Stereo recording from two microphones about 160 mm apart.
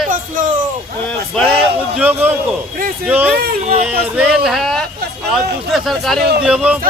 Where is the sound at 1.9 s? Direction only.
10° right (ahead or behind).